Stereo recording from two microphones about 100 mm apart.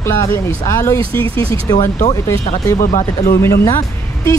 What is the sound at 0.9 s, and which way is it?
Speech, 65° right (ahead or behind).